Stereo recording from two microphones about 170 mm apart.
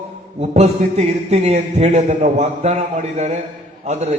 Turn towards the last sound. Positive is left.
turn(degrees=-40)  # may be behind; listen again after turning